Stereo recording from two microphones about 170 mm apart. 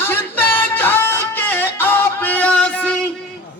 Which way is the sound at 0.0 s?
10° left (ahead or behind).